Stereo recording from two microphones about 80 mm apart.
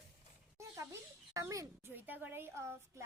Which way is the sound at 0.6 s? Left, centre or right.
Right.